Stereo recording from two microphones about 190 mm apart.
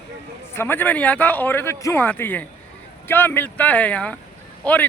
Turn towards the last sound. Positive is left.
turn(degrees=10)  # may be behind; listen again after turning